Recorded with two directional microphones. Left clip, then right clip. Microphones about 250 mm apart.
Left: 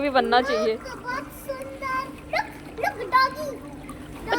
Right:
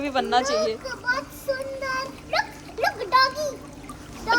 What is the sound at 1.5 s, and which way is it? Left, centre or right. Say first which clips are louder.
Child singing: right 6 dB; right.